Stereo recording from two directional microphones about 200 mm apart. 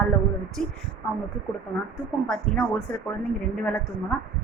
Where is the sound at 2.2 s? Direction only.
5° left (ahead or behind).